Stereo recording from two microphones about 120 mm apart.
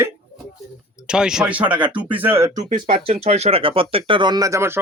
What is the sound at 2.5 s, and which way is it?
Speech, 70° right (ahead or behind).